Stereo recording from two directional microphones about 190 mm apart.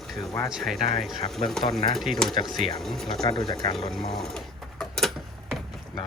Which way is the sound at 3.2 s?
25° left (ahead or behind).